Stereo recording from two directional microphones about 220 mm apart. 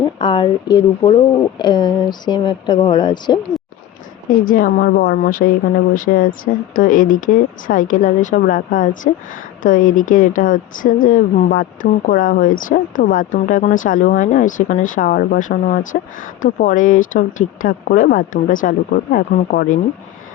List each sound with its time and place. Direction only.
0.0 s speech: 20° left (ahead or behind)
4.4 s a woman's voice: 45° left (ahead or behind)